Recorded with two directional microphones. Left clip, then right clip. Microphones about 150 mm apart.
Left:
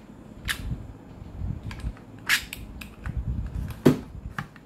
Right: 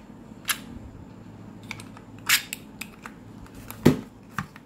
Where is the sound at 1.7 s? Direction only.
60° right (ahead or behind).